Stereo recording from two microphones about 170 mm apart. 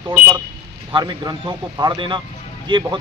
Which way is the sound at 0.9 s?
25° right (ahead or behind).